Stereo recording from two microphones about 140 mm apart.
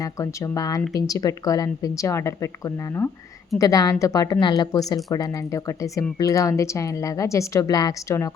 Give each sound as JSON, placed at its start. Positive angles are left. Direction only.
{"t": 0.0, "sound": "speech", "side_deg": 20}